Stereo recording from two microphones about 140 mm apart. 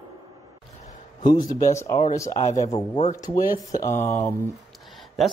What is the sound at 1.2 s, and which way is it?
Speech, 30° left (ahead or behind).